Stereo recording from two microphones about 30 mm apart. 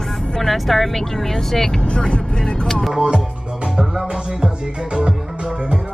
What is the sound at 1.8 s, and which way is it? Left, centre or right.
Speech, left.